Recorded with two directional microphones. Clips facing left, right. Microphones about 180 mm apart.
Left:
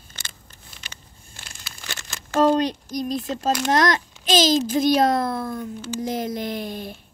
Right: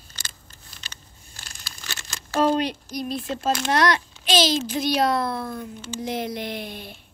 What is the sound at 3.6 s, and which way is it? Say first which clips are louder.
A child's voice: left 1 dB; 45° left (ahead or behind).